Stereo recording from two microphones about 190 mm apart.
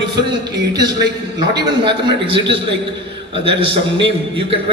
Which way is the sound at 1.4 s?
20° right (ahead or behind).